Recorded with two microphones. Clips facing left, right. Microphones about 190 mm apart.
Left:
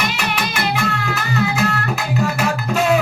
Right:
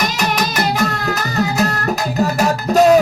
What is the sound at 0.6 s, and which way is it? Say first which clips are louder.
Music: right 3 dB; 40° right (ahead or behind).